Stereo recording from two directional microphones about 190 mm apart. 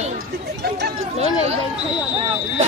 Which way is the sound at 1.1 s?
35° right (ahead or behind).